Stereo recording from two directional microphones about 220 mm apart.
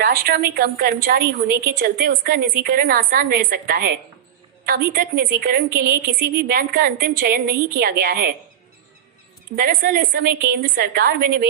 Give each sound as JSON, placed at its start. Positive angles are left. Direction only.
{"t": 0.0, "sound": "a woman's voice", "side_deg": -45}
{"t": 9.6, "sound": "a woman's voice", "side_deg": -45}